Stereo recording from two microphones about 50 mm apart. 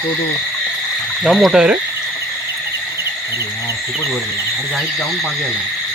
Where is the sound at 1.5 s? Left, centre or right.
Centre.